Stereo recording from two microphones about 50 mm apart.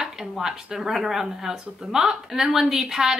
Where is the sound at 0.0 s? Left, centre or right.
Centre.